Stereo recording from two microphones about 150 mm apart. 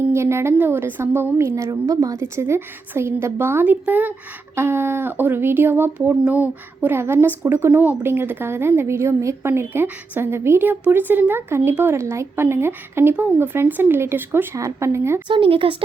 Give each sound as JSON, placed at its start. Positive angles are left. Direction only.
{"t": 0.1, "sound": "speech", "side_deg": -15}
{"t": 15.3, "sound": "speech", "side_deg": -35}